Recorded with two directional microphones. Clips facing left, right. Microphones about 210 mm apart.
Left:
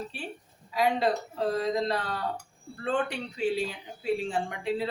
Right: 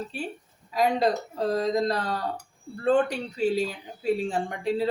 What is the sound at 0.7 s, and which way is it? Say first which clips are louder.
Speech: right 2 dB; 40° right (ahead or behind).